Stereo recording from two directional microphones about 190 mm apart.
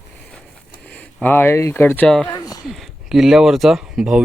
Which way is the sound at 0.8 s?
5° left (ahead or behind).